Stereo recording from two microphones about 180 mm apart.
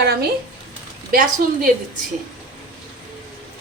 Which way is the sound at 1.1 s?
50° right (ahead or behind).